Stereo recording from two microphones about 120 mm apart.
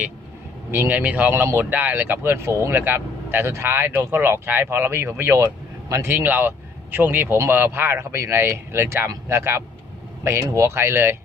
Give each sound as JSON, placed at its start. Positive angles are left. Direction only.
{"t": 0.7, "sound": "speech", "side_deg": -15}